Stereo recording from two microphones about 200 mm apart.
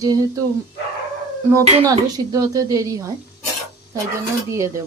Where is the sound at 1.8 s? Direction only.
20° right (ahead or behind).